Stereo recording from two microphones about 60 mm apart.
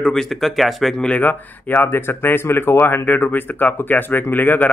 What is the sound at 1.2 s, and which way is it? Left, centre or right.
Speech, left.